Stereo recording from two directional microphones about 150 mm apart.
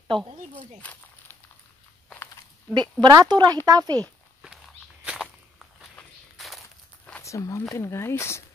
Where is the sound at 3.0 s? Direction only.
25° right (ahead or behind).